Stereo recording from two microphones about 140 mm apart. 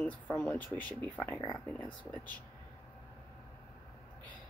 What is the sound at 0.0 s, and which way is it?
Speech, 10° left (ahead or behind).